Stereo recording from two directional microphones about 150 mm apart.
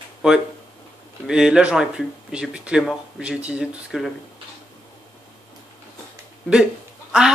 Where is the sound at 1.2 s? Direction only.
5° right (ahead or behind).